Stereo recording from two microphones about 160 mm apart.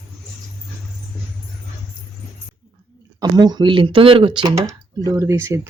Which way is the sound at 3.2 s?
25° right (ahead or behind).